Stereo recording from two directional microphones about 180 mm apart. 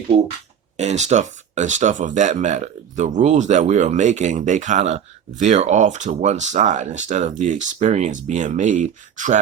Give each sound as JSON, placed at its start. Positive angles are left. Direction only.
{"t": 0.8, "sound": "speech", "side_deg": -40}